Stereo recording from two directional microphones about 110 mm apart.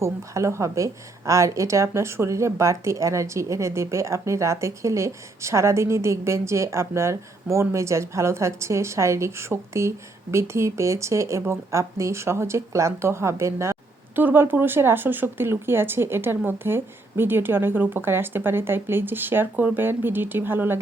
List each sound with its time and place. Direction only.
0.0 s a woman's voice: 25° right (ahead or behind)